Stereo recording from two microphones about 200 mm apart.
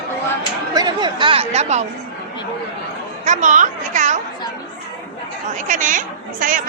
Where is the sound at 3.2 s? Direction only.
40° right (ahead or behind).